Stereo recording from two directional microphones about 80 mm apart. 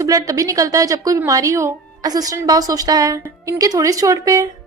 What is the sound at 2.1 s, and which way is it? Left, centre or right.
A woman's voice, right.